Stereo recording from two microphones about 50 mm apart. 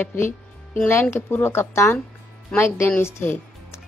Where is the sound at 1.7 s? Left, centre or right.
Left.